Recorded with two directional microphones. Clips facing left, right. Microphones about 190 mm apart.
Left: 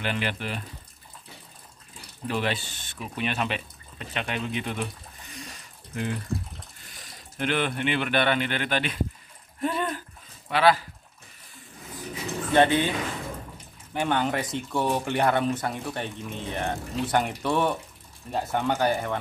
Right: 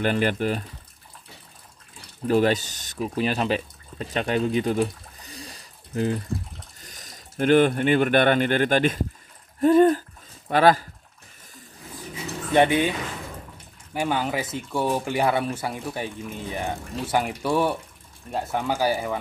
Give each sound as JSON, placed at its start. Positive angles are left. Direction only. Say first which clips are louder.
{"t": 0.0, "sound": "speech", "louder": "right 7 dB", "side_deg": -45}
{"t": 2.2, "sound": "speech", "louder": "right 8 dB", "side_deg": -40}
{"t": 9.6, "sound": "a sound", "louder": "right 12 dB", "side_deg": -45}
{"t": 10.5, "sound": "speech", "louder": "right 3 dB", "side_deg": -45}
{"t": 12.5, "sound": "speech", "louder": "right 2 dB", "side_deg": -15}
{"t": 13.9, "sound": "speech", "louder": "even", "side_deg": -5}